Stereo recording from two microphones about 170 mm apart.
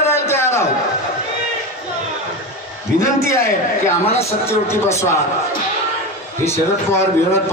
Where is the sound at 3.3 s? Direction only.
15° left (ahead or behind).